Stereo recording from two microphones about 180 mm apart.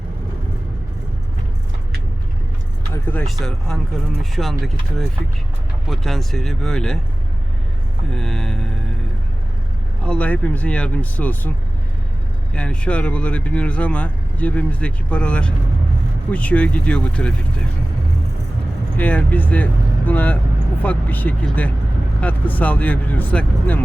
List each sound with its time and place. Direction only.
2.9 s speech: 10° left (ahead or behind)
8.1 s speech: 5° left (ahead or behind)
10.0 s speech: 5° left (ahead or behind)
12.5 s speech: 5° left (ahead or behind)
18.9 s speech: 10° left (ahead or behind)